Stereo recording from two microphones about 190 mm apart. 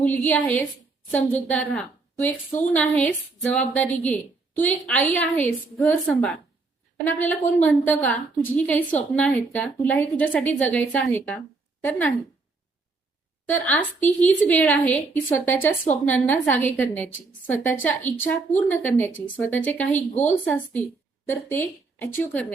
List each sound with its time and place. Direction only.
0.3 s a woman's voice: 5° left (ahead or behind)
13.7 s a woman's voice: 10° left (ahead or behind)
20.0 s a woman's voice: 40° left (ahead or behind)
20.4 s a woman's voice: 10° left (ahead or behind)